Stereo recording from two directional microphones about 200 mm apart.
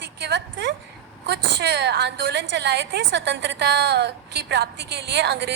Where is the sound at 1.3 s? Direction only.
60° right (ahead or behind).